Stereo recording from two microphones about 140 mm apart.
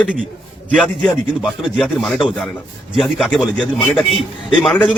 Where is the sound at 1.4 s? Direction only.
Centre (ahead or behind).